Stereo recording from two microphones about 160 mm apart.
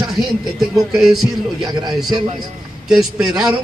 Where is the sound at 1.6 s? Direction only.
25° right (ahead or behind).